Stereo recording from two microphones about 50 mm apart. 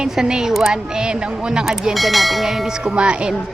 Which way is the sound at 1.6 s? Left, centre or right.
Centre.